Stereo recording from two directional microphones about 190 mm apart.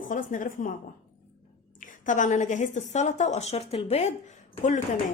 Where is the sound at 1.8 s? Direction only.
45° left (ahead or behind).